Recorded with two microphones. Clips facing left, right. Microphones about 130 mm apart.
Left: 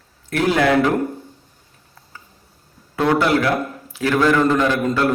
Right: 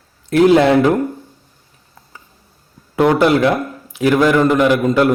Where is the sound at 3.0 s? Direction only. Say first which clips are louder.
Right 5 dB; 20° right (ahead or behind).